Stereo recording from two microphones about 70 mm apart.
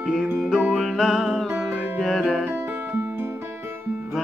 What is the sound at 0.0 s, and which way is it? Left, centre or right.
Music, centre.